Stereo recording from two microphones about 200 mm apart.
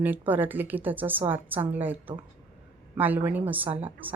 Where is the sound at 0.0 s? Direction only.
10° right (ahead or behind).